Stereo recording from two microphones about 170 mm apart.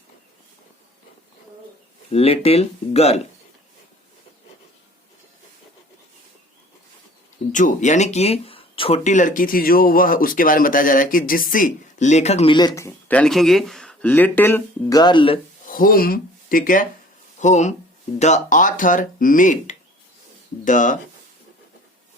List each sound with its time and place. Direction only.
2.1 s speech: 35° left (ahead or behind)
7.5 s speech: 45° left (ahead or behind)
9.0 s speech: 50° left (ahead or behind)
12.5 s speech: 20° left (ahead or behind)
15.6 s speech: 55° left (ahead or behind)